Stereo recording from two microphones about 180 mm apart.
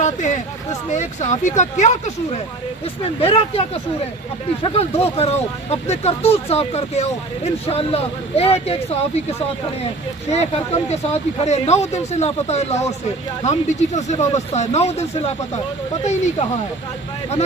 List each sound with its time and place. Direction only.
0.0 s speech: 40° left (ahead or behind)
4.6 s speech: 30° left (ahead or behind)